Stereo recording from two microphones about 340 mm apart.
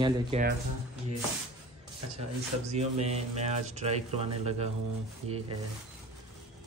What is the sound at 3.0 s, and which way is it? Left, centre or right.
Speech, centre.